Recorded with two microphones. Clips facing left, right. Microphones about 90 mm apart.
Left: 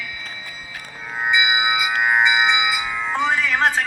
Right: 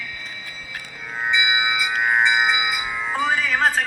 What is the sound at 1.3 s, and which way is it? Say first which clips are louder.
Music: left 2 dB; 15° left (ahead or behind).